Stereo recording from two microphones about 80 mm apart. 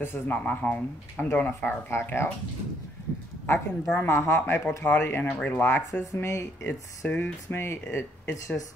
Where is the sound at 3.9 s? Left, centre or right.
Left.